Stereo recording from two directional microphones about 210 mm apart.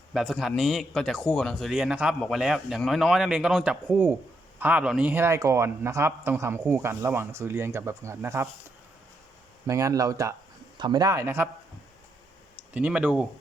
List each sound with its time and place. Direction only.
0.1 s a man's voice: centre (ahead or behind)
9.6 s speech: 15° right (ahead or behind)
12.7 s a man's voice: 5° right (ahead or behind)